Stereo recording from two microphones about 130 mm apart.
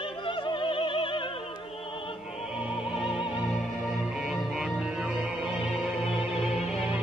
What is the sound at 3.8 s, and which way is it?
Music, centre (ahead or behind).